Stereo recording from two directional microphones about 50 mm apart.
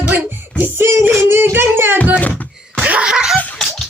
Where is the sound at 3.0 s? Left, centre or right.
Centre.